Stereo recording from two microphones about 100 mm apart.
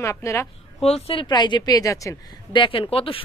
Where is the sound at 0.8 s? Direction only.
80° left.